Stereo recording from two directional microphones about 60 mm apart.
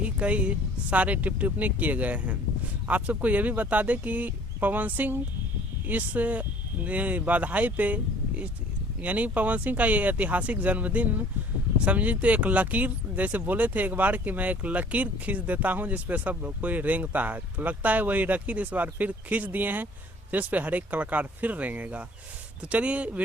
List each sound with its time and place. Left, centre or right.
0.0 s speech: right